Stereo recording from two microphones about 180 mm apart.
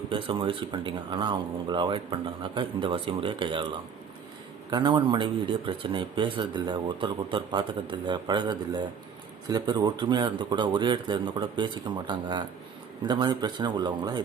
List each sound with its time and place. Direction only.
0.1 s speech: 30° right (ahead or behind)